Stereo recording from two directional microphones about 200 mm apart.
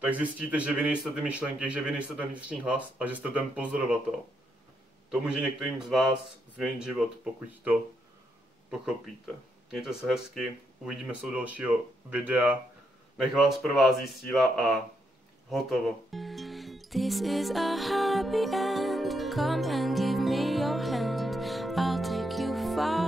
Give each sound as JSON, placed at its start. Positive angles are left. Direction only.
{"t": 0.0, "sound": "speech", "side_deg": -5}
{"t": 5.1, "sound": "speech", "side_deg": -5}
{"t": 15.5, "sound": "music", "side_deg": 0}